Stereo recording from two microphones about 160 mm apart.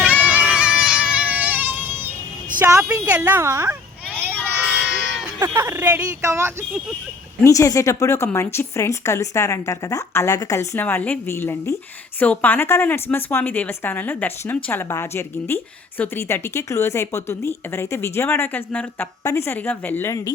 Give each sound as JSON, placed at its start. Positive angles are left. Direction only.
{"t": 0.0, "sound": "a sound", "side_deg": -10}
{"t": 2.6, "sound": "a woman's voice", "side_deg": -15}
{"t": 5.2, "sound": "speech", "side_deg": -15}
{"t": 7.4, "sound": "speech", "side_deg": 20}